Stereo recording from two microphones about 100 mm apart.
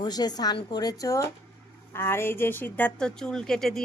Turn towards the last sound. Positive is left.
turn(degrees=5)  # may be behind; listen again after turning